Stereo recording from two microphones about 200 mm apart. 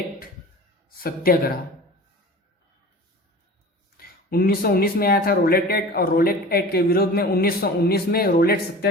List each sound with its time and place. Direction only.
0.9 s speech: 50° left (ahead or behind)
3.9 s speech: 50° left (ahead or behind)